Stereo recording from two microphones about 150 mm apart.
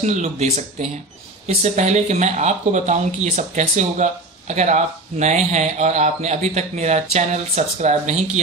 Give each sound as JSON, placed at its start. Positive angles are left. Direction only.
{"t": 0.0, "sound": "speech", "side_deg": -50}